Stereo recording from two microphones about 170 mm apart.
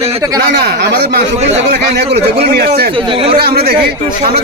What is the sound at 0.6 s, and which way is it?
Speech, 75° right (ahead or behind).